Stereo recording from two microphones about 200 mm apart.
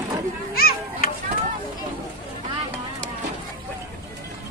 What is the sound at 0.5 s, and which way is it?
Children playing, 50° left (ahead or behind).